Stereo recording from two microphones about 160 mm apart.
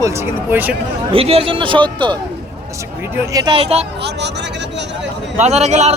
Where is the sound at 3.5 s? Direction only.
40° right (ahead or behind).